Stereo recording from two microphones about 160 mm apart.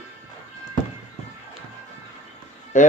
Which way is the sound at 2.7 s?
50° left (ahead or behind).